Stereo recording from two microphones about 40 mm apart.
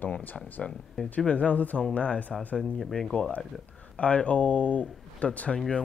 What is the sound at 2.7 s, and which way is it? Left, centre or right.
Speech, centre.